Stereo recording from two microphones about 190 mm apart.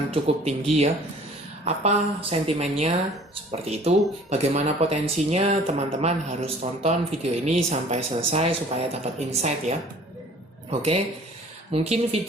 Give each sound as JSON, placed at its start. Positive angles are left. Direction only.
{"t": 0.1, "sound": "speech", "side_deg": -30}